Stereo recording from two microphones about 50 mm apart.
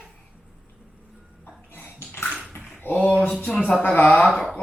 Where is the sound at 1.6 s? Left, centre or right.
Left.